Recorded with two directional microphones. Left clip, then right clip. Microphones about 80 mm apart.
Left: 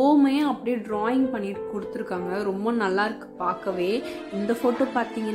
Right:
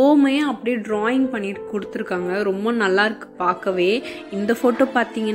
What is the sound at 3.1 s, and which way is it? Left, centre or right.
Speech, right.